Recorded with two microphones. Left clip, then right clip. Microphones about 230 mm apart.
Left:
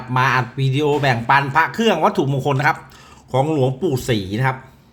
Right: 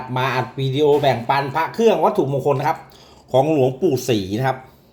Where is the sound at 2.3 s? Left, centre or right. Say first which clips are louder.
Right 2 dB; left.